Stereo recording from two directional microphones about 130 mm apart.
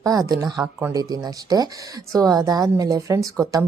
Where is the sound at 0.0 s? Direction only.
30° right (ahead or behind).